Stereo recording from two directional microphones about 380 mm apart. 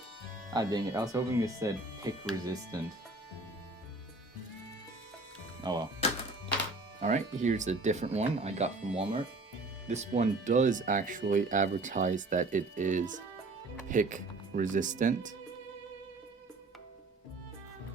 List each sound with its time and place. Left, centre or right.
0.5 s speech: centre
5.6 s speech: centre
7.0 s speech: centre